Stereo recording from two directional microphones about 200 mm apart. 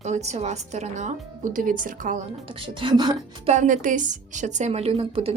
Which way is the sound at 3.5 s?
40° right (ahead or behind).